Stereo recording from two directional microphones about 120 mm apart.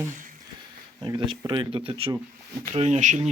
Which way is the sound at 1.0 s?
45° right (ahead or behind).